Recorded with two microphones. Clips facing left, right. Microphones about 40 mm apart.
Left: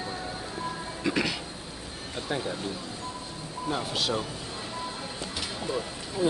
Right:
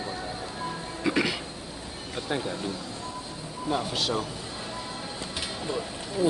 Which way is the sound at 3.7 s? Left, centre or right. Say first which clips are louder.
Right 2 dB; centre.